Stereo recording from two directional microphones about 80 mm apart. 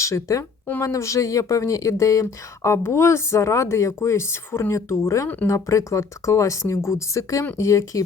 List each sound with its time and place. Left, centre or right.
0.0 s speech: left